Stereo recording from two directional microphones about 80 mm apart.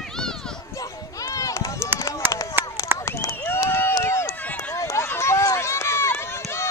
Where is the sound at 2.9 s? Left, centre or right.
Left.